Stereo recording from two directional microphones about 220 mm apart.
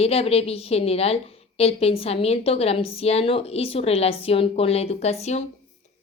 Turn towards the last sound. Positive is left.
turn(degrees=30)  # may be behind; listen again after turning